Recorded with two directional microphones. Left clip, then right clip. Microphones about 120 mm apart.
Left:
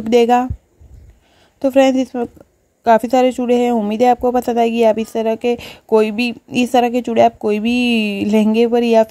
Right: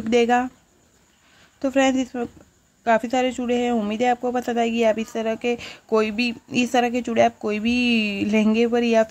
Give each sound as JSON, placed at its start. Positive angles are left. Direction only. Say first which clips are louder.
{"t": 0.0, "sound": "speech", "louder": "left 6 dB", "side_deg": 35}
{"t": 1.6, "sound": "speech", "louder": "left 7 dB", "side_deg": 40}